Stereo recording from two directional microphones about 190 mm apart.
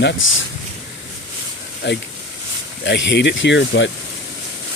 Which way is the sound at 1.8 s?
65° left (ahead or behind).